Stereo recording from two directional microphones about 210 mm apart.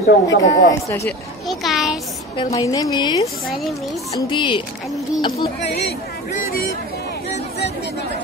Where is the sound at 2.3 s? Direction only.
20° left (ahead or behind).